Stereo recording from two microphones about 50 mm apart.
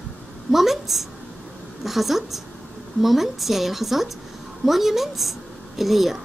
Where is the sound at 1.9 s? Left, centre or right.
Centre.